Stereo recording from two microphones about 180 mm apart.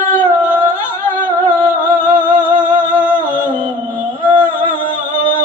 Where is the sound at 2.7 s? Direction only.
25° right (ahead or behind).